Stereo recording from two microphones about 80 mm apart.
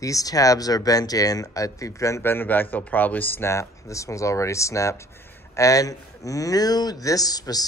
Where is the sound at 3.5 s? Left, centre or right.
Left.